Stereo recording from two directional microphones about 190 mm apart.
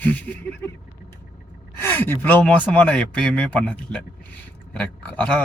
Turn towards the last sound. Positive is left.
turn(degrees=5)  # may be behind; listen again after turning